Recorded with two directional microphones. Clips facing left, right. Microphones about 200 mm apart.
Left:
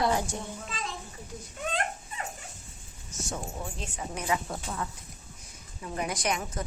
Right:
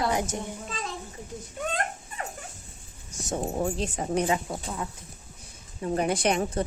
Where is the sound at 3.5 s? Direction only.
45° right (ahead or behind).